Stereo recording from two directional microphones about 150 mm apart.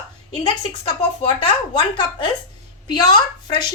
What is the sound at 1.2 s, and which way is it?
A woman's voice, 35° left (ahead or behind).